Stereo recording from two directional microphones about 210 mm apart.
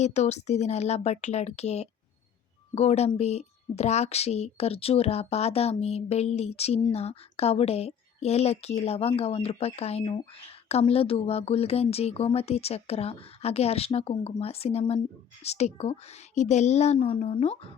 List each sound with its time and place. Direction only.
0.0 s a woman's voice: 30° left (ahead or behind)